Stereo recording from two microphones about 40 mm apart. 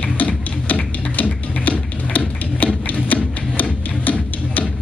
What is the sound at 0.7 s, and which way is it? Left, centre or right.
Music, left.